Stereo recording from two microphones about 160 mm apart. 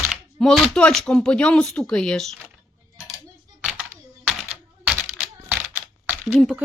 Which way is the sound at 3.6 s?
5° right (ahead or behind).